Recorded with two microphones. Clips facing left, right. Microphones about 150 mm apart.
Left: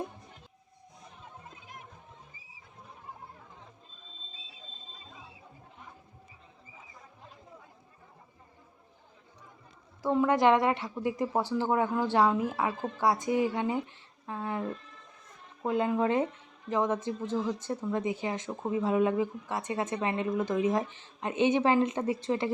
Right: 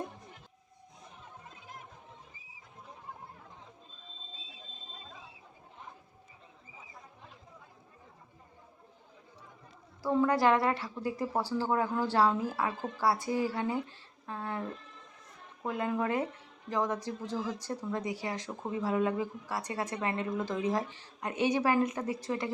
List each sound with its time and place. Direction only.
10.0 s a woman's voice: 20° left (ahead or behind)